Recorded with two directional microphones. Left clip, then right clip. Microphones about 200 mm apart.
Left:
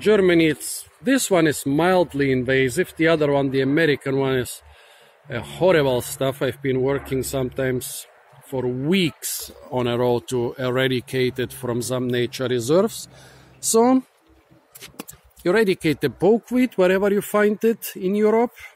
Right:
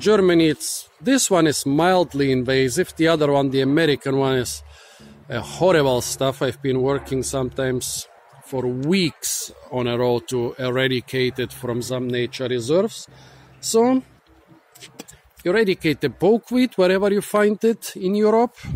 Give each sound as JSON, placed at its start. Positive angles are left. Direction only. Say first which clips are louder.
{"t": 0.0, "sound": "speech", "louder": "right 1 dB", "side_deg": -10}
{"t": 11.8, "sound": "speech", "louder": "left 1 dB", "side_deg": 15}
{"t": 15.4, "sound": "speech", "louder": "even", "side_deg": 10}